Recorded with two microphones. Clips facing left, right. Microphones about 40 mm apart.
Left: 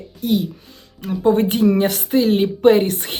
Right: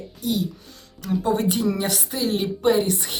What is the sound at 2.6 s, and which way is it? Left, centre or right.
Speech, left.